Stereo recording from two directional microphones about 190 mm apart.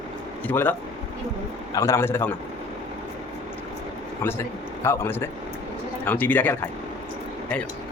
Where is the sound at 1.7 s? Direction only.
15° left (ahead or behind).